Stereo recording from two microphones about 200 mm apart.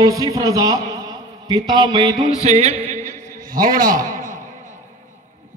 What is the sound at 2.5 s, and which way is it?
Music, 35° right (ahead or behind).